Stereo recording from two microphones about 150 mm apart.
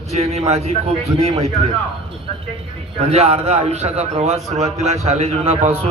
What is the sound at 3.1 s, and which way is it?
A man's voice, 45° right (ahead or behind).